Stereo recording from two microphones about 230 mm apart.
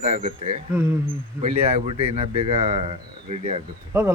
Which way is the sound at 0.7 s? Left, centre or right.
Centre.